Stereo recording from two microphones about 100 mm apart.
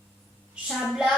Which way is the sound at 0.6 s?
5° right (ahead or behind).